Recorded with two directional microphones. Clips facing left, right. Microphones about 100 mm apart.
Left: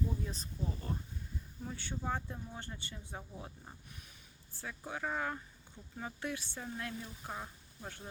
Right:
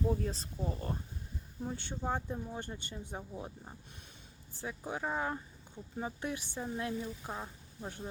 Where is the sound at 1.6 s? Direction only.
30° right (ahead or behind).